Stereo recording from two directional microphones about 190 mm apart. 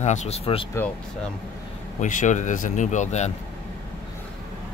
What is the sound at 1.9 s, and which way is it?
Speech, 40° left (ahead or behind).